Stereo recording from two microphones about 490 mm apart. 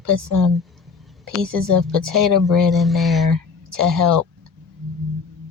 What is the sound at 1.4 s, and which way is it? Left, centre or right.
Speech, right.